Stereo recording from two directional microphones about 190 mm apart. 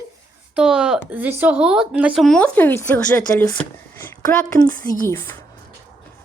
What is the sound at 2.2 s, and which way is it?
Speech, 5° left (ahead or behind).